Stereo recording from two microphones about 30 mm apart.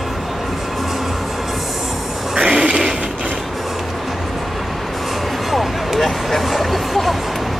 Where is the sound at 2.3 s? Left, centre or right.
Right.